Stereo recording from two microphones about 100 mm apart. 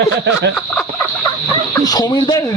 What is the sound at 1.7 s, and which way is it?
Speech, 40° left (ahead or behind).